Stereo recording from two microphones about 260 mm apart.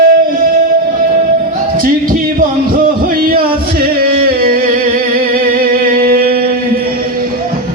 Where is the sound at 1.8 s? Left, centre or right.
Right.